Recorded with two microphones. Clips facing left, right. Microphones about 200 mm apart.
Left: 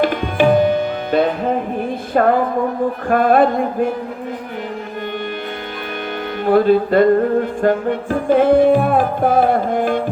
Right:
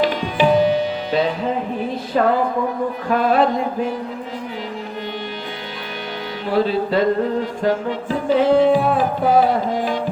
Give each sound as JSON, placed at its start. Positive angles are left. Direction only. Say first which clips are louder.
{"t": 0.0, "sound": "tabla", "louder": "left 2 dB", "side_deg": 55}
{"t": 2.2, "sound": "music", "louder": "left 3 dB", "side_deg": 50}
{"t": 6.4, "sound": "music", "louder": "left 6 dB", "side_deg": 50}